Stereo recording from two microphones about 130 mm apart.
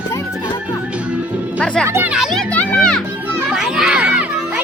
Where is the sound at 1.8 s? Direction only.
20° right (ahead or behind).